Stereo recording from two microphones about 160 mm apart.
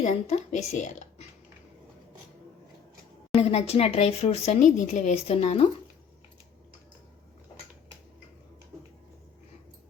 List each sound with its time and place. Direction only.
0.0 s speech: 50° left (ahead or behind)
3.3 s speech: 40° left (ahead or behind)